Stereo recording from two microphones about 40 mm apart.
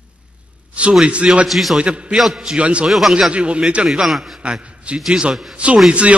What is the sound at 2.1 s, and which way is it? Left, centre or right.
Speech, centre.